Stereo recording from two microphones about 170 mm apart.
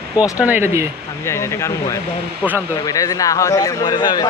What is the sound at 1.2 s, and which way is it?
Speech, 15° left (ahead or behind).